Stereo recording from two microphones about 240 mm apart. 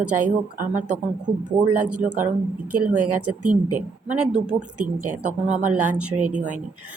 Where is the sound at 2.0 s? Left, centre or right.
Right.